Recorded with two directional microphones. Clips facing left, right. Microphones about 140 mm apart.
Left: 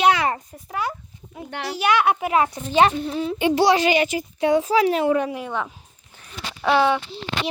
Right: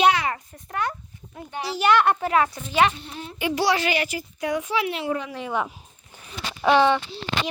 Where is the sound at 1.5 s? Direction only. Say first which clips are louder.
Even; 60° left (ahead or behind).